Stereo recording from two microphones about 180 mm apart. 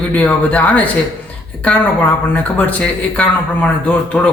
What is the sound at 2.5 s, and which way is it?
A man's voice, 5° left (ahead or behind).